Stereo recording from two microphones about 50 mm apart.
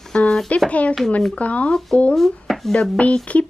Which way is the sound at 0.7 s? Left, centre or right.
Left.